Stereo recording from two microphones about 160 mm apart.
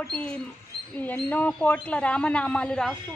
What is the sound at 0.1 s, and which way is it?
Speech, 5° left (ahead or behind).